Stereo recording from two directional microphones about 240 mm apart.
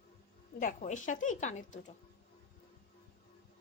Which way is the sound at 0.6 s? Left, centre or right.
Left.